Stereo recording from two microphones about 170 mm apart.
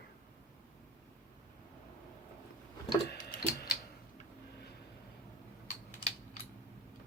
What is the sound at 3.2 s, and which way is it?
Tick-tock, 50° left (ahead or behind).